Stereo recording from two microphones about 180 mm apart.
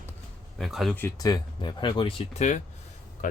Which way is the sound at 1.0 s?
15° left (ahead or behind).